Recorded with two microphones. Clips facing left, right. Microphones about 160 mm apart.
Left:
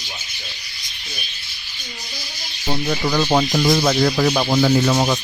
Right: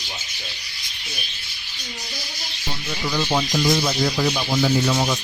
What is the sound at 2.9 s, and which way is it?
Speech, 60° left (ahead or behind).